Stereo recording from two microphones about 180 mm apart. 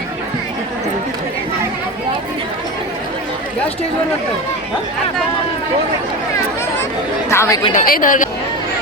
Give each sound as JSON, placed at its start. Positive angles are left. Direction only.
{"t": 7.3, "sound": "speech", "side_deg": 15}
{"t": 7.7, "sound": "a woman's voice", "side_deg": 50}